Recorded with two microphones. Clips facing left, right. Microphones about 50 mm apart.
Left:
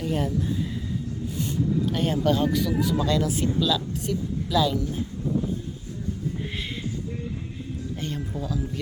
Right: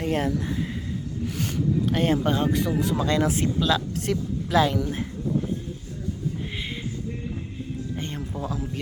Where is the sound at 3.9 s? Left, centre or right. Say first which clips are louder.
Right 1 dB; right.